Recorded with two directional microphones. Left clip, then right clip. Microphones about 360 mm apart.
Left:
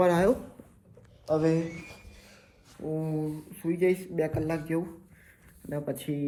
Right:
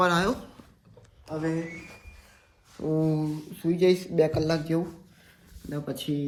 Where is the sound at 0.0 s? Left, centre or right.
Centre.